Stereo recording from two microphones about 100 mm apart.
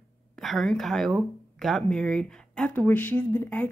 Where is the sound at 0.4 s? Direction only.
Centre (ahead or behind).